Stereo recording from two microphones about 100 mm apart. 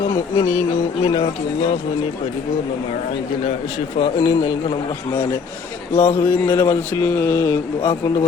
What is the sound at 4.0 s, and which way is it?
Speech, 90° left.